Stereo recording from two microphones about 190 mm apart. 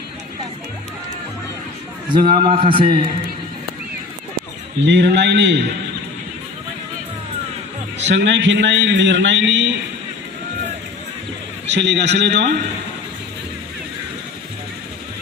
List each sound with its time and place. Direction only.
2.1 s a man's voice: 25° right (ahead or behind)
4.9 s a man's voice: 65° right (ahead or behind)
8.0 s a man's voice: 65° right (ahead or behind)
11.7 s a man's voice: 65° right (ahead or behind)